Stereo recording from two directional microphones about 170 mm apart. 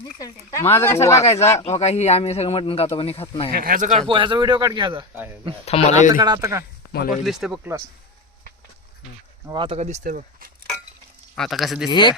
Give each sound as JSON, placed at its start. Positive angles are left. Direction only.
{"t": 0.0, "sound": "speech", "side_deg": 20}
{"t": 1.6, "sound": "speech", "side_deg": 40}
{"t": 3.5, "sound": "speech", "side_deg": -60}
{"t": 4.1, "sound": "a man's voice", "side_deg": -30}
{"t": 5.6, "sound": "speech", "side_deg": 40}
{"t": 6.1, "sound": "speech", "side_deg": -20}
{"t": 6.9, "sound": "speech", "side_deg": 60}
{"t": 7.3, "sound": "speech", "side_deg": 0}
{"t": 9.5, "sound": "speech", "side_deg": -30}
{"t": 11.3, "sound": "speech", "side_deg": 0}
{"t": 11.9, "sound": "speech", "side_deg": 25}